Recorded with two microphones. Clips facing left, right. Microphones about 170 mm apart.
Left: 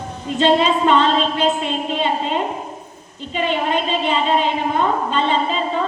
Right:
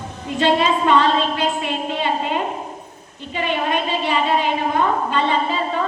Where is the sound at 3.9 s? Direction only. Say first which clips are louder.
Left 1 dB; 20° left (ahead or behind).